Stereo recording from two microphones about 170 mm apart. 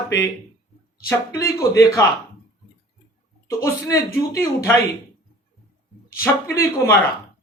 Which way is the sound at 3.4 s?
15° left (ahead or behind).